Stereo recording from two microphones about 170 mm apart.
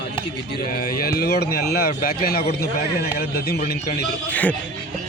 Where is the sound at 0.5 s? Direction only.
60° left (ahead or behind).